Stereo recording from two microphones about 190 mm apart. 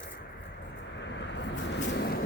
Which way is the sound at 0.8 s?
70° left (ahead or behind).